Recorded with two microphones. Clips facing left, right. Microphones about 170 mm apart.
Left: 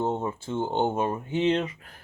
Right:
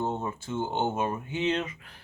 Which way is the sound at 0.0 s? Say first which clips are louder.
Left 3 dB; 25° left (ahead or behind).